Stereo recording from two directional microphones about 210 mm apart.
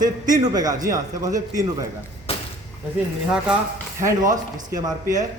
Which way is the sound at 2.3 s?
25° left (ahead or behind).